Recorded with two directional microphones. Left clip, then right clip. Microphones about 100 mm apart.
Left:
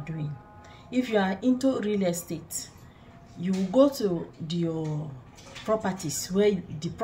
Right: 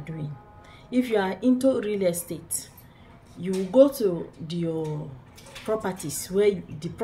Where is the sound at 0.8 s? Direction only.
20° right (ahead or behind).